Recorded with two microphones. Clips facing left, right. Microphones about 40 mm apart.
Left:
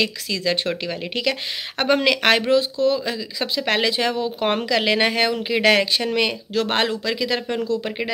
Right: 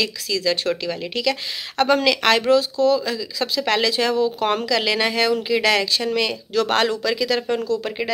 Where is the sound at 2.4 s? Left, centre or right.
Centre.